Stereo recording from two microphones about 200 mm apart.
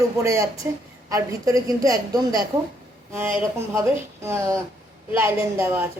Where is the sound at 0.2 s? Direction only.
15° right (ahead or behind).